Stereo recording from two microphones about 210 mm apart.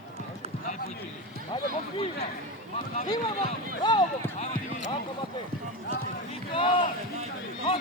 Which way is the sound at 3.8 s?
20° left (ahead or behind).